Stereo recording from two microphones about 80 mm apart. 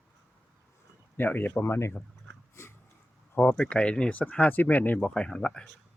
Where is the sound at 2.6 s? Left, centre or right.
Left.